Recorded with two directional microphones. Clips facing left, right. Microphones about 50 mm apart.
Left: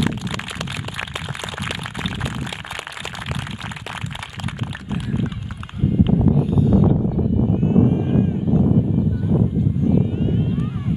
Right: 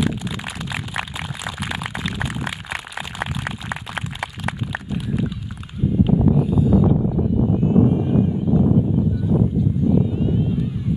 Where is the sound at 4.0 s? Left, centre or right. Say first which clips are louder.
Right 4 dB; right.